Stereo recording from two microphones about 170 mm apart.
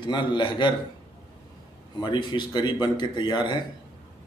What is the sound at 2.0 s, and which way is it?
A man's voice, 25° left (ahead or behind).